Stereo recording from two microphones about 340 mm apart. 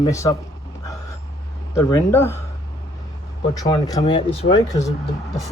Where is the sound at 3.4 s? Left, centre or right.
Centre.